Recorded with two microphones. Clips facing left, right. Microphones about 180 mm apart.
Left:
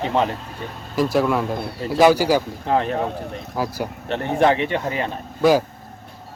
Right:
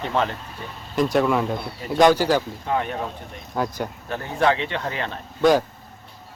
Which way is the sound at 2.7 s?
30° left (ahead or behind).